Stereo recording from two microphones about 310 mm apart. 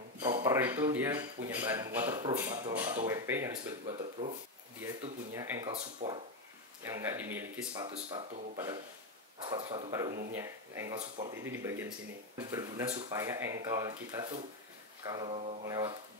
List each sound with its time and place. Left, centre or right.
0.2 s speech: centre
3.8 s speech: centre
5.3 s speech: centre